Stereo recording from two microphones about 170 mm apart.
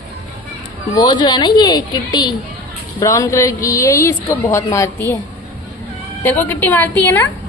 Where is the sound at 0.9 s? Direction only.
25° left (ahead or behind).